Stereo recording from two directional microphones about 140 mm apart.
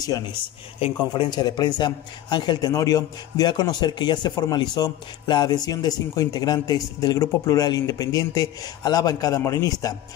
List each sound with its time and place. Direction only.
0.7 s a man's voice: 40° left (ahead or behind)